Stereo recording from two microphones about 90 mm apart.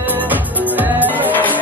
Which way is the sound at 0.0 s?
20° right (ahead or behind).